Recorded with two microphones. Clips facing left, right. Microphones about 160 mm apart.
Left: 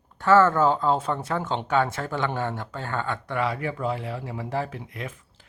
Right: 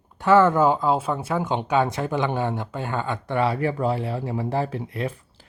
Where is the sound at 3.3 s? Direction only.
30° right (ahead or behind).